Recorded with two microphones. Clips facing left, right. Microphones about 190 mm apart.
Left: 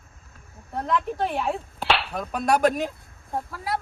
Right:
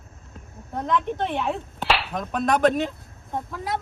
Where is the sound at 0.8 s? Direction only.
5° left (ahead or behind).